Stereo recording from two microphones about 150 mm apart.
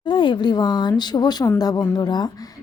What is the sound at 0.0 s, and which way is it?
A woman's voice, 30° left (ahead or behind).